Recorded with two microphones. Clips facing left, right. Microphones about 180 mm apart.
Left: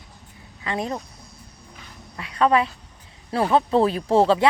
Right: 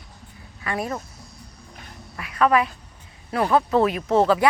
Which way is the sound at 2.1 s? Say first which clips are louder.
Even; 25° left (ahead or behind).